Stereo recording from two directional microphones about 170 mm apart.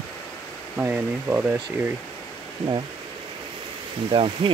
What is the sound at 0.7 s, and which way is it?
Speech, 10° right (ahead or behind).